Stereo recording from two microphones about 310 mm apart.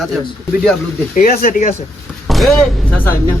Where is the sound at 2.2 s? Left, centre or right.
Centre.